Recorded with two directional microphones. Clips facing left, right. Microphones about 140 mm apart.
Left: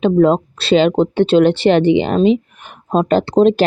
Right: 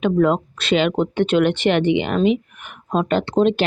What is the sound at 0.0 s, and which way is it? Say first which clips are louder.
Speech: left 5 dB; 30° left (ahead or behind).